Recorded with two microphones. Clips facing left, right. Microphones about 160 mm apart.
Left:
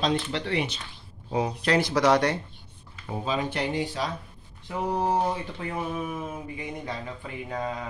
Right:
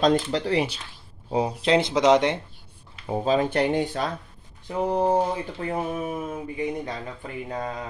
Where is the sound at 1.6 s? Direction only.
25° right (ahead or behind).